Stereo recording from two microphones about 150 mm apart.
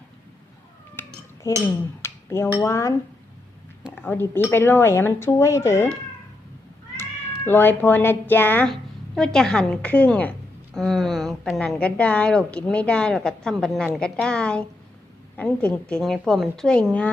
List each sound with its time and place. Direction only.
1.0 s cutlery: 15° left (ahead or behind)
1.5 s speech: 20° left (ahead or behind)
2.0 s a sound: 15° left (ahead or behind)
2.6 s speech: 20° left (ahead or behind)
3.9 s speech: 10° left (ahead or behind)
6.9 s a woman's voice: 15° left (ahead or behind)